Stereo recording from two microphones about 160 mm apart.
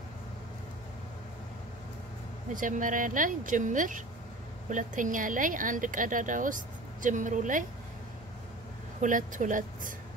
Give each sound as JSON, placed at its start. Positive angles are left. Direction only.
{"t": 2.5, "sound": "a woman's voice", "side_deg": -55}
{"t": 9.0, "sound": "a woman's voice", "side_deg": -55}